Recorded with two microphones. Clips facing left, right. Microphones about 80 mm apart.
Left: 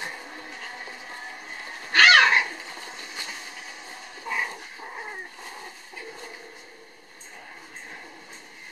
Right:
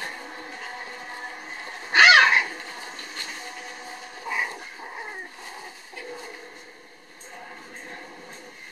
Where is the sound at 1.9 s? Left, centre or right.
Centre.